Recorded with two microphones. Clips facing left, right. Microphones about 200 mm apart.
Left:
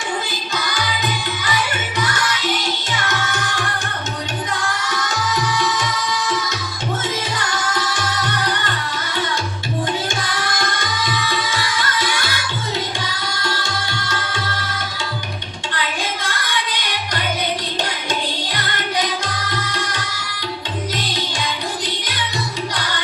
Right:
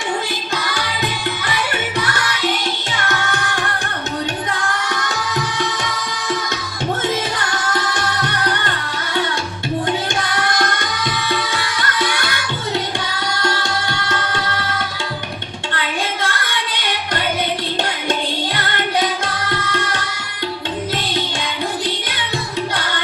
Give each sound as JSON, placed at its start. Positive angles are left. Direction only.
{"t": 2.9, "sound": "music", "side_deg": -60}
{"t": 10.2, "sound": "music", "side_deg": -60}
{"t": 13.3, "sound": "music", "side_deg": -60}